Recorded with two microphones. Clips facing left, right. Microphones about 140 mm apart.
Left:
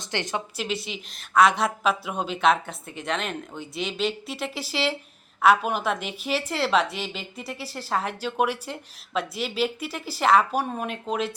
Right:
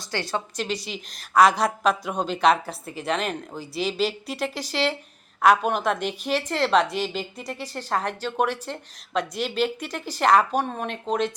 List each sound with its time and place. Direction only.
0.0 s a woman's voice: 20° left (ahead or behind)
0.5 s a woman's voice: 5° left (ahead or behind)